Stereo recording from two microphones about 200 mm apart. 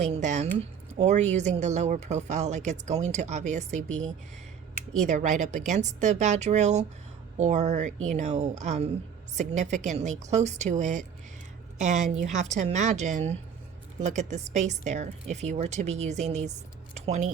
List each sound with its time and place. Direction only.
0.0 s a woman's voice: 35° right (ahead or behind)
5.0 s a woman's voice: 35° right (ahead or behind)